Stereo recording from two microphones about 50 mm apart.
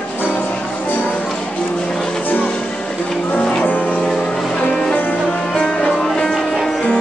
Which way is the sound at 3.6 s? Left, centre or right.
Left.